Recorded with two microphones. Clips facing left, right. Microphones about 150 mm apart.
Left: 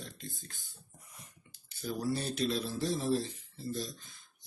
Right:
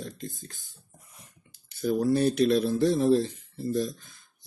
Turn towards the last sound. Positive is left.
turn(degrees=-50)  # may be behind; listen again after turning